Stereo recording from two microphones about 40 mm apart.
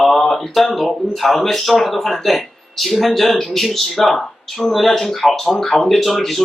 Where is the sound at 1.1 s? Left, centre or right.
Centre.